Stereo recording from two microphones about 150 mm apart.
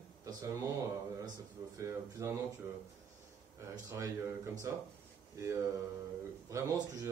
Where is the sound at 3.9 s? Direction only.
20° right (ahead or behind).